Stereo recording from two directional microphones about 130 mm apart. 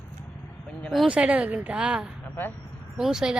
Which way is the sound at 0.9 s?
5° right (ahead or behind).